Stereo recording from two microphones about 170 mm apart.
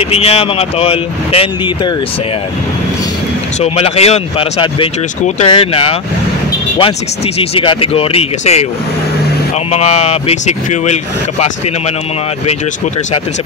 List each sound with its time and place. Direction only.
0.0 s speech: 35° left (ahead or behind)
3.6 s speech: 35° left (ahead or behind)
7.3 s speech: 35° left (ahead or behind)
9.7 s speech: 40° left (ahead or behind)